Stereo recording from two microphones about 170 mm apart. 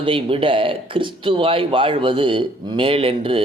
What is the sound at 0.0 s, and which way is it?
Speech, 30° right (ahead or behind).